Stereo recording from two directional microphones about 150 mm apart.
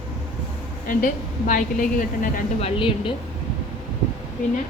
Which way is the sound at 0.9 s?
60° left (ahead or behind).